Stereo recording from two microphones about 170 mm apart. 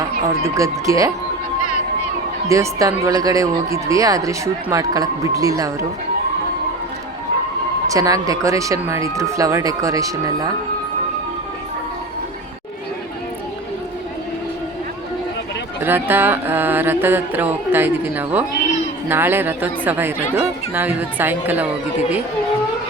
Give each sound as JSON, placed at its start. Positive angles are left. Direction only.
{"t": 0.4, "sound": "speech", "side_deg": -20}
{"t": 2.5, "sound": "speech", "side_deg": -20}
{"t": 7.9, "sound": "speech", "side_deg": -20}
{"t": 15.8, "sound": "music", "side_deg": -10}